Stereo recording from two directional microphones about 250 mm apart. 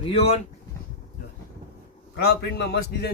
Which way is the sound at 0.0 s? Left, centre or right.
Left.